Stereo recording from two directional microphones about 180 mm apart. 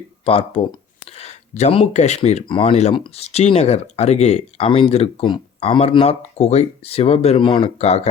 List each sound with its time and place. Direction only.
0.3 s speech: 30° left (ahead or behind)